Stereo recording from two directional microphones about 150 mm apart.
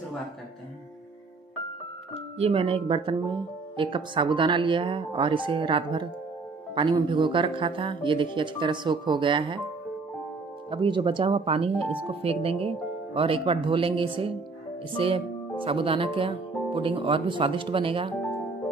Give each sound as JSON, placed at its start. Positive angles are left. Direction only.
{"t": 2.3, "sound": "speech", "side_deg": -40}
{"t": 10.7, "sound": "speech", "side_deg": -35}